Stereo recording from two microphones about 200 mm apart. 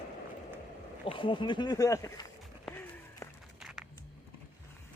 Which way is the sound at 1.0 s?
25° left (ahead or behind).